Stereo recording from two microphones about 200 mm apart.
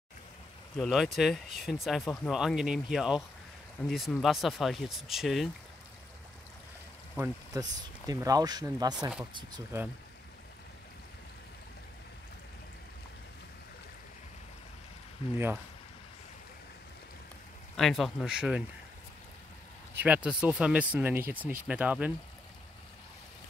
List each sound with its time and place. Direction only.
0.7 s speech: centre (ahead or behind)
7.5 s speech: 15° right (ahead or behind)
15.3 s speech: 10° right (ahead or behind)
17.7 s speech: centre (ahead or behind)
19.9 s speech: 10° right (ahead or behind)